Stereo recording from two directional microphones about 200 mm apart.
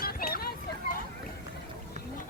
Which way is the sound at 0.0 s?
50° left (ahead or behind).